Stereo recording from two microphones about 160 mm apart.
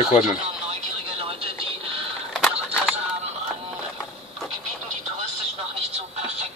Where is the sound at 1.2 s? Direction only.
35° right (ahead or behind).